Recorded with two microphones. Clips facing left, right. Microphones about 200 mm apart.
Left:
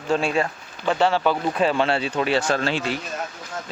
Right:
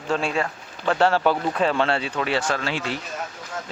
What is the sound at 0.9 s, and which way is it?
Speech, 10° right (ahead or behind).